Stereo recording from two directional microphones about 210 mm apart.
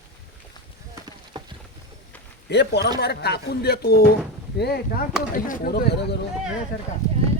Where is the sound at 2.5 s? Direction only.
55° left (ahead or behind).